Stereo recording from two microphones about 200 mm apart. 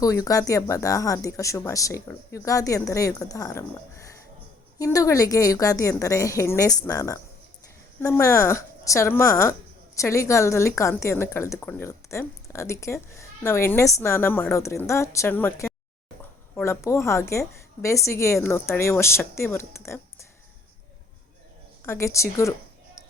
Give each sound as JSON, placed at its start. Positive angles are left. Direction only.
{"t": 0.0, "sound": "speech", "side_deg": 15}
{"t": 21.8, "sound": "speech", "side_deg": 15}